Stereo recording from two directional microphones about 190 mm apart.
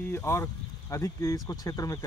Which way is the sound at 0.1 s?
15° left (ahead or behind).